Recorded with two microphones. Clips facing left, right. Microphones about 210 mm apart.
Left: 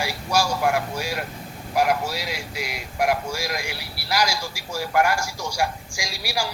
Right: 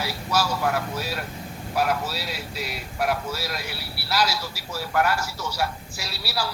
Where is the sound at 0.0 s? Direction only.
10° left (ahead or behind).